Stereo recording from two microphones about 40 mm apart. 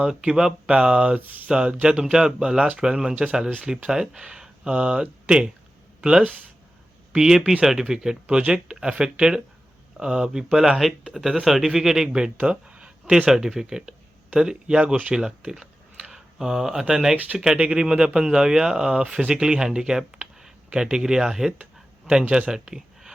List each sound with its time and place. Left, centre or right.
0.2 s speech: centre
1.2 s speech: right
1.5 s speech: right
12.5 s a sound: right
13.3 s speech: centre
15.1 s a sound: centre
16.8 s speech: centre
22.3 s speech: right